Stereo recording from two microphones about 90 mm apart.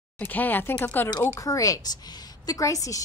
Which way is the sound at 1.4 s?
40° left (ahead or behind).